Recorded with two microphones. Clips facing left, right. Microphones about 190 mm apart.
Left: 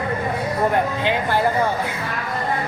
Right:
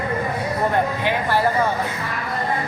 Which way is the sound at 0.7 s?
20° left (ahead or behind).